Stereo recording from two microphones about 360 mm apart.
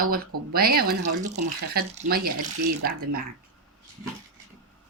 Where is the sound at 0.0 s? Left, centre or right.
Right.